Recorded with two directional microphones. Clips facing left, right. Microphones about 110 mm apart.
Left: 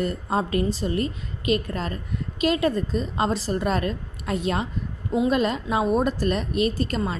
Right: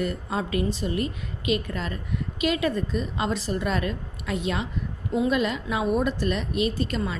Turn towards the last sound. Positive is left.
turn(degrees=40)  # may be behind; listen again after turning